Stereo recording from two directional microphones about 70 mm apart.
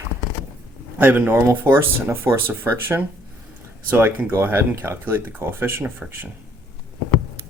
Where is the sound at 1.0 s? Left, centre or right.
Right.